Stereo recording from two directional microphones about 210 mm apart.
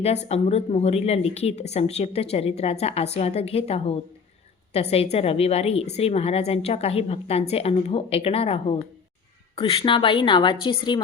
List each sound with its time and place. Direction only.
0.0 s a woman's voice: 30° left (ahead or behind)